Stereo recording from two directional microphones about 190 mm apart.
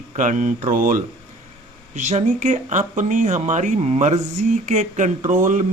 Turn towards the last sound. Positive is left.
turn(degrees=-40)  # may be behind; listen again after turning